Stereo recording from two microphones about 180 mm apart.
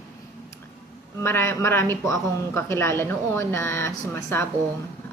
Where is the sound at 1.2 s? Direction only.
15° left (ahead or behind).